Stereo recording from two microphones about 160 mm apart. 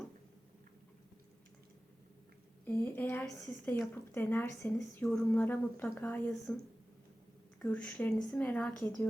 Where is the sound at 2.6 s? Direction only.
10° left (ahead or behind).